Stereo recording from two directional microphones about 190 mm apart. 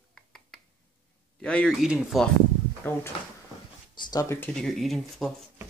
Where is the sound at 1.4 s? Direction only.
5° left (ahead or behind).